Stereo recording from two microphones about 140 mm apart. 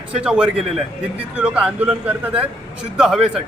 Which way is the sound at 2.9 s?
5° right (ahead or behind).